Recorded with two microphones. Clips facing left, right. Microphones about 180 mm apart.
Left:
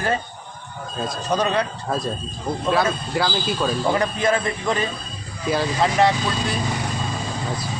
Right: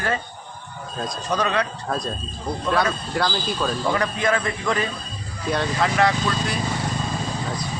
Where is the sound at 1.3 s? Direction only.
30° left (ahead or behind).